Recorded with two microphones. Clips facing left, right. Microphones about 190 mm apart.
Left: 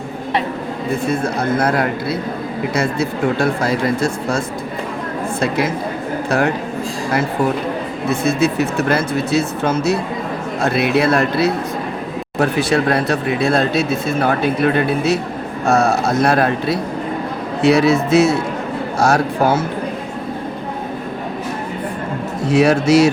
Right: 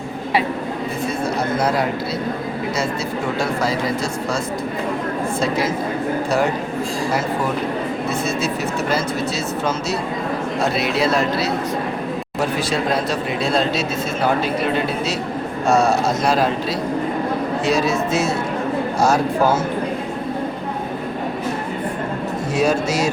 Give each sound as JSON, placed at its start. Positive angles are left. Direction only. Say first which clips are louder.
{"t": 1.2, "sound": "speech", "louder": "left 2 dB", "side_deg": 55}
{"t": 5.4, "sound": "speech", "louder": "left 3 dB", "side_deg": 60}
{"t": 8.2, "sound": "speech", "louder": "left 6 dB", "side_deg": 60}
{"t": 22.5, "sound": "speech", "louder": "left 7 dB", "side_deg": 70}